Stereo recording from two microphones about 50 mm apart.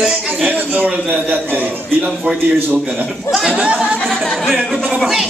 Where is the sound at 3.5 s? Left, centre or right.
Right.